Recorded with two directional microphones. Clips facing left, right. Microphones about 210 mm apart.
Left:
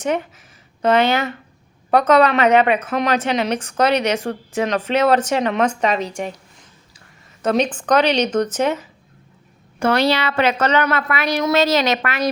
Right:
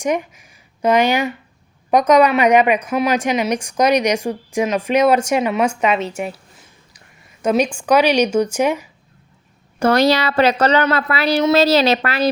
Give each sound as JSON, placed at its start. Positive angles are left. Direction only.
{"t": 0.0, "sound": "a woman's voice", "side_deg": -10}
{"t": 9.8, "sound": "speech", "side_deg": -40}